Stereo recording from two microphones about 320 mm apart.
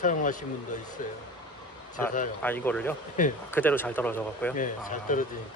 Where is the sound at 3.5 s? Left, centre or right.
Centre.